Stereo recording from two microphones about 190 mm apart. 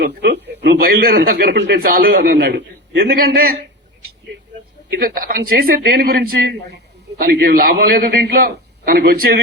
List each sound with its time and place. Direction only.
0.0 s speech: 60° right (ahead or behind)
4.9 s a man's voice: 50° right (ahead or behind)